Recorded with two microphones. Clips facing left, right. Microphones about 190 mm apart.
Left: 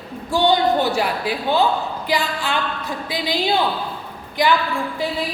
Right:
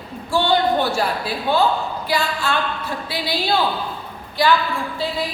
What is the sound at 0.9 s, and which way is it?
A woman's voice, 15° left (ahead or behind).